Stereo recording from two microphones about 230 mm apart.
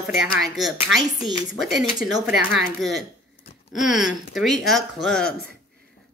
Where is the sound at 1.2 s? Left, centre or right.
Centre.